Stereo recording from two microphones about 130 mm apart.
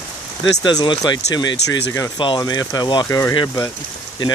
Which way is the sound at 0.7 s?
30° left (ahead or behind).